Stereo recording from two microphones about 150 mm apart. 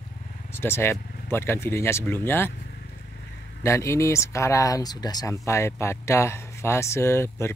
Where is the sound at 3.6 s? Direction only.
20° left (ahead or behind).